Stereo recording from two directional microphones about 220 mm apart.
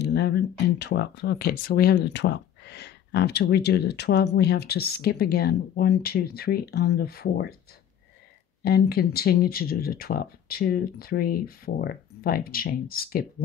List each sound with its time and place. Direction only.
0.0 s speech: 50° left (ahead or behind)
8.6 s speech: 45° left (ahead or behind)